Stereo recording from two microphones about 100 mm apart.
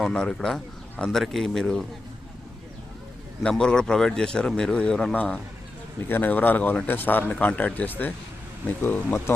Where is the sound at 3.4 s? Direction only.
10° left (ahead or behind).